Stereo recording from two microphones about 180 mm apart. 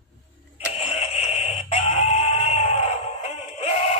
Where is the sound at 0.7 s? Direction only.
35° left (ahead or behind).